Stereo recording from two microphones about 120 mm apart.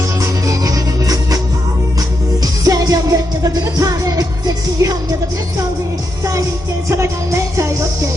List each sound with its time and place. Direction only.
0.2 s music: 30° right (ahead or behind)
6.8 s music: 25° right (ahead or behind)